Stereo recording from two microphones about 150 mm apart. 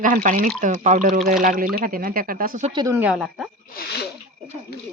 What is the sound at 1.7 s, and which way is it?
Speech, 75° right (ahead or behind).